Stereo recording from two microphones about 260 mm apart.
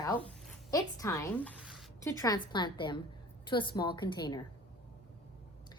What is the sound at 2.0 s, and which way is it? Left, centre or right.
Speech, centre.